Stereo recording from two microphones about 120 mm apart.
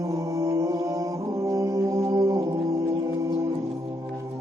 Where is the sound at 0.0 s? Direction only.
25° right (ahead or behind).